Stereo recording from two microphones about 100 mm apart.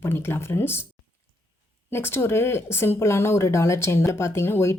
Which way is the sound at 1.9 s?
25° left (ahead or behind).